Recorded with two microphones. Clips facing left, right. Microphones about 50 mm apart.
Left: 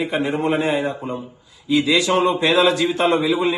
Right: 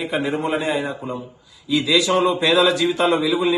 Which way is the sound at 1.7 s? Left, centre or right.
Left.